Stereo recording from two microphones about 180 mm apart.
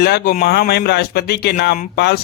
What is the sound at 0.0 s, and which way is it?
Speech, 65° left (ahead or behind).